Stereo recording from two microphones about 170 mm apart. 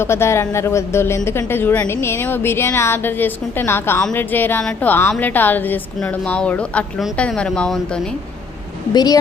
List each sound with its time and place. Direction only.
0.0 s speech: 15° left (ahead or behind)
8.9 s speech: 25° left (ahead or behind)